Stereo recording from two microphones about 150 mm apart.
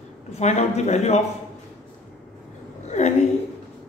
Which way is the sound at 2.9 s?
50° left (ahead or behind).